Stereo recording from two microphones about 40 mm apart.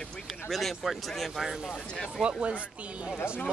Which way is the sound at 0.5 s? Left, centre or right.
Centre.